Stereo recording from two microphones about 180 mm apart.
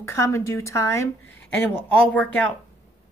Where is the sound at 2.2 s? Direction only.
10° left (ahead or behind).